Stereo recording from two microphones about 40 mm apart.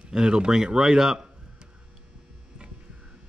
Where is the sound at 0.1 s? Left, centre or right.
Right.